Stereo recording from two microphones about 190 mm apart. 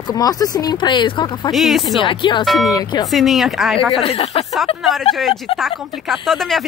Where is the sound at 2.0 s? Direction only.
25° left (ahead or behind).